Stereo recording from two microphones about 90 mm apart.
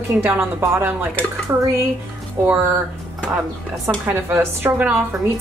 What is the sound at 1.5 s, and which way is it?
Speech, 35° right (ahead or behind).